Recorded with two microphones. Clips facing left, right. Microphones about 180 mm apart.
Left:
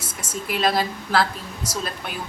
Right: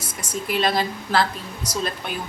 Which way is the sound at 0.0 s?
25° left (ahead or behind).